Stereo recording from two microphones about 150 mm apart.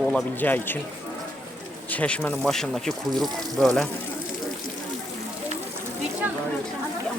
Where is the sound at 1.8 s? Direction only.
10° left (ahead or behind).